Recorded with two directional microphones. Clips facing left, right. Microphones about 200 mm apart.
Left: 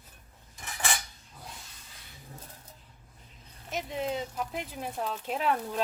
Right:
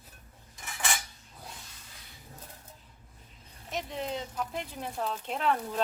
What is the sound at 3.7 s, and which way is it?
Speech, 5° left (ahead or behind).